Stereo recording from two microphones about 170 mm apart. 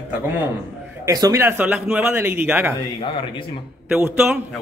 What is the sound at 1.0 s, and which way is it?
Speech, 20° right (ahead or behind).